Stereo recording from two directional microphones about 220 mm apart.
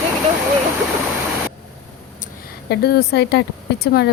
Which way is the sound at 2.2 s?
45° left (ahead or behind).